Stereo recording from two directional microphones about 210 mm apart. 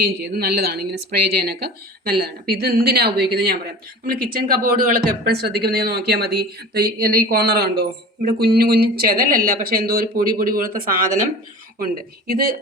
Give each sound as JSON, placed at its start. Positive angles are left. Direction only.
{"t": 0.0, "sound": "speech", "side_deg": -45}
{"t": 12.3, "sound": "speech", "side_deg": -45}